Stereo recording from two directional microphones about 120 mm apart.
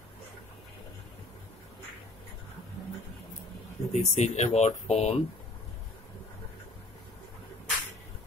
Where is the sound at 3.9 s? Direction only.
65° left (ahead or behind).